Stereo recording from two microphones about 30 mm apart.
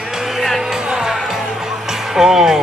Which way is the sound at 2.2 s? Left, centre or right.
Centre.